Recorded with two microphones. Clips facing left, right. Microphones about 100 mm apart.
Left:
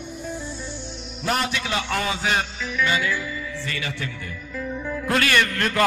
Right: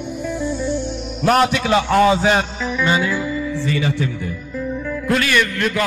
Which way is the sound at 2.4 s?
35° right (ahead or behind).